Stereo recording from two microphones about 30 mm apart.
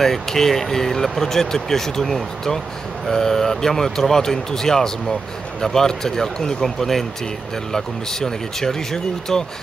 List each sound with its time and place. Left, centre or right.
0.0 s speech: centre